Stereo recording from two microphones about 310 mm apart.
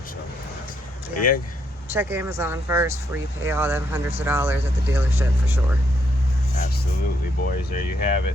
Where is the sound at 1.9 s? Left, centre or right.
Centre.